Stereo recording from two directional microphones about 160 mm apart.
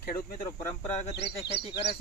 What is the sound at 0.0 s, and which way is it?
Speech, 60° left (ahead or behind).